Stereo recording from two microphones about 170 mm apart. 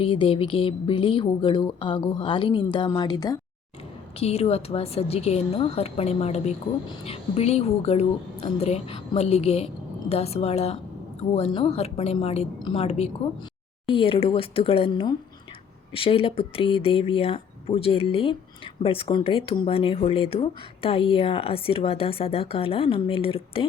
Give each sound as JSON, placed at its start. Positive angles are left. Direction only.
{"t": 0.0, "sound": "speech", "side_deg": 30}
{"t": 4.2, "sound": "speech", "side_deg": 35}